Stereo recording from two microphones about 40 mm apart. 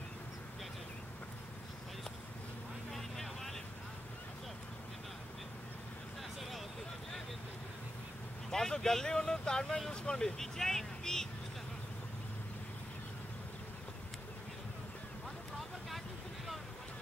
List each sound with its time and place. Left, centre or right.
2.9 s vehicle: centre
8.5 s speech: centre